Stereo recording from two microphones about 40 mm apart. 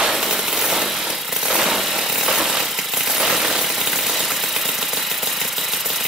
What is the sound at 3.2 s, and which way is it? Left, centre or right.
Coin, centre.